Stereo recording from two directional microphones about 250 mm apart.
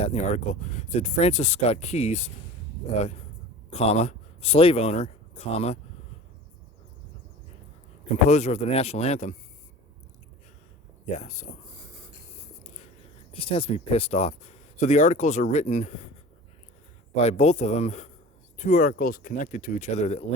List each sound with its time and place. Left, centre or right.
0.0 s speech: left
3.7 s speech: left
8.3 s speech: left
11.0 s speech: left
13.3 s speech: left
17.2 s speech: left